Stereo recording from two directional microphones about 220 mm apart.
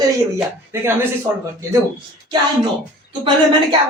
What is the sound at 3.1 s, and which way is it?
Speech, 20° right (ahead or behind).